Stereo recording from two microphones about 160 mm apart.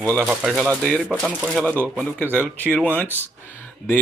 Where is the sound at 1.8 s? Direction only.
10° left (ahead or behind).